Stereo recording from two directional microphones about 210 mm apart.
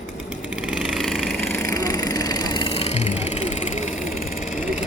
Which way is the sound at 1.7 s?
15° left (ahead or behind).